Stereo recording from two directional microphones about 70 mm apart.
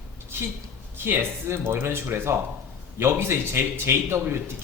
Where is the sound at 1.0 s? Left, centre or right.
Right.